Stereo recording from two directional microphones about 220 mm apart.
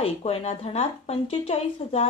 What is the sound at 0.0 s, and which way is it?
Speech, 25° left (ahead or behind).